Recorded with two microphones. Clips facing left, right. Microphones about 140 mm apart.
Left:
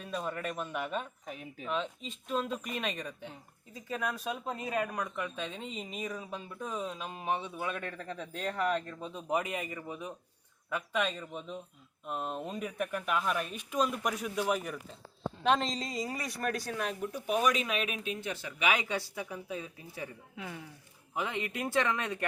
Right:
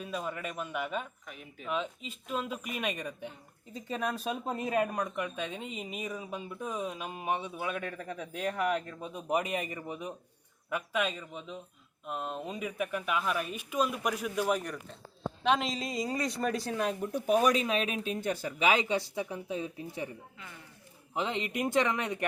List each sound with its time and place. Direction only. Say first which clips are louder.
0.0 s speech: even; 5° right (ahead or behind)
3.8 s speech: right 2 dB; 25° right (ahead or behind)
20.3 s speech: left 7 dB; 90° left
21.2 s speech: right 3 dB; 20° right (ahead or behind)